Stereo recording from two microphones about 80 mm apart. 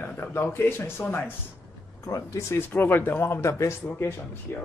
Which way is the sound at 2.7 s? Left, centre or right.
Left.